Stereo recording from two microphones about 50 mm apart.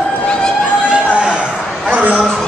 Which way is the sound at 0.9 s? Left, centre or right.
Centre.